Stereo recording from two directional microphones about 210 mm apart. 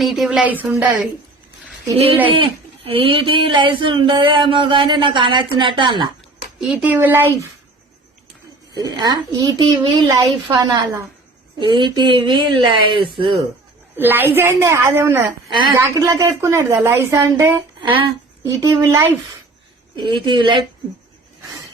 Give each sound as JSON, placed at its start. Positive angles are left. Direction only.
{"t": 0.0, "sound": "a woman's voice", "side_deg": 0}
{"t": 2.2, "sound": "speech", "side_deg": -25}
{"t": 6.6, "sound": "a woman's voice", "side_deg": -5}
{"t": 8.7, "sound": "speech", "side_deg": -20}
{"t": 13.9, "sound": "a woman's voice", "side_deg": -10}
{"t": 17.7, "sound": "a woman's voice", "side_deg": -25}